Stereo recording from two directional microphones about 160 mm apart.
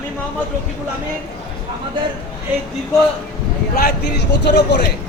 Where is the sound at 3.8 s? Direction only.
90° left.